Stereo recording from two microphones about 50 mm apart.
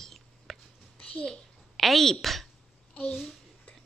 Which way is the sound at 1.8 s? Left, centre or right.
Centre.